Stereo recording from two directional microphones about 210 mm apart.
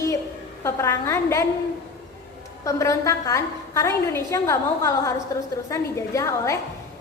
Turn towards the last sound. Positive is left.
turn(degrees=15)  # may be behind; listen again after turning